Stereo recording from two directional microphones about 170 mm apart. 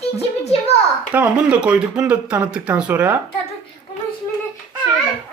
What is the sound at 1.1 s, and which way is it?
Speech, 10° right (ahead or behind).